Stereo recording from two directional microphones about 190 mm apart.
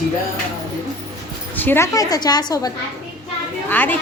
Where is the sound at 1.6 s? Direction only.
10° left (ahead or behind).